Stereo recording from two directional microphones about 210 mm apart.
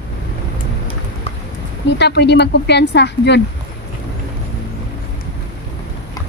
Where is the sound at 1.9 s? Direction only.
55° left (ahead or behind).